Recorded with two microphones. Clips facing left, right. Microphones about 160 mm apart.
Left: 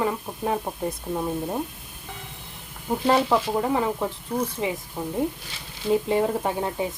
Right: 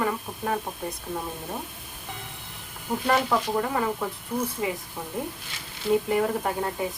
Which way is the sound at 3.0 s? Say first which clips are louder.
Left 3 dB; 25° left (ahead or behind).